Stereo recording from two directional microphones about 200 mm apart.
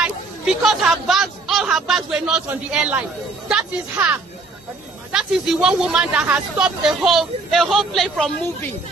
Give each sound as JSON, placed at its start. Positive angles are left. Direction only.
{"t": 0.0, "sound": "a woman's voice", "side_deg": 0}
{"t": 5.1, "sound": "speech", "side_deg": -5}